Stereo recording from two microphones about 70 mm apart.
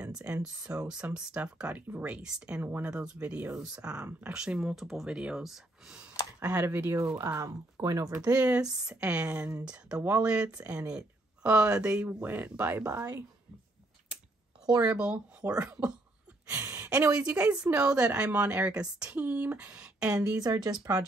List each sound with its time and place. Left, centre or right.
0.0 s speech: centre
1.8 s speech: right
2.0 s speech: centre
6.4 s speech: right
7.4 s speech: right
8.4 s speech: centre
14.9 s speech: centre
16.4 s a sound: right
16.7 s a sound: right
17.2 s speech: centre
20.3 s speech: right